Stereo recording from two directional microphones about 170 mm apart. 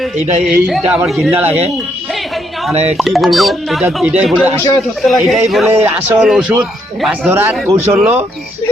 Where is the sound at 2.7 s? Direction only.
40° right (ahead or behind).